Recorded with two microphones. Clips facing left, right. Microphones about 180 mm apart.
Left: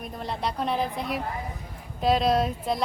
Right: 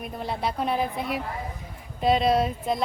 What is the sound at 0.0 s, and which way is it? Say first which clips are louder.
Speech: right 2 dB; 5° right (ahead or behind).